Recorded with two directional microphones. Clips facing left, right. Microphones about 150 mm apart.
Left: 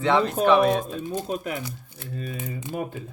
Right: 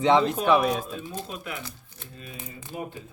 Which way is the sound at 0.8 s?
45° left (ahead or behind).